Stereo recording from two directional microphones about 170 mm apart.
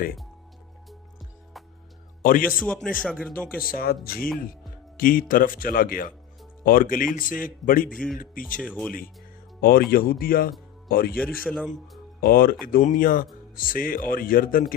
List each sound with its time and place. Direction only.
2.2 s speech: 55° left (ahead or behind)
2.5 s a man's voice: 5° left (ahead or behind)
3.6 s speech: 60° left (ahead or behind)
7.9 s a man's voice: 5° left (ahead or behind)
8.2 s speech: 55° left (ahead or behind)
8.6 s speech: 5° left (ahead or behind)
9.6 s speech: 60° left (ahead or behind)
11.2 s a man's voice: centre (ahead or behind)
12.2 s speech: 60° left (ahead or behind)